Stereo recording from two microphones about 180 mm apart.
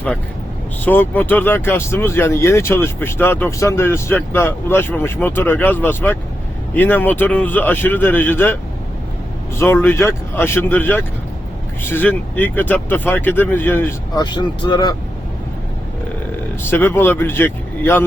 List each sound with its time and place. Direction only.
0.9 s speech: 10° left (ahead or behind)
9.6 s speech: 15° left (ahead or behind)
14.2 s speech: 25° left (ahead or behind)
16.6 s speech: 10° left (ahead or behind)